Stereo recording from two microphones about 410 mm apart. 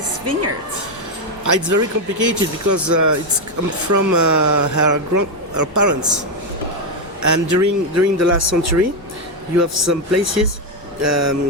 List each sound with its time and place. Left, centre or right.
0.3 s a man's voice: right
1.5 s speech: right
7.2 s a man's voice: right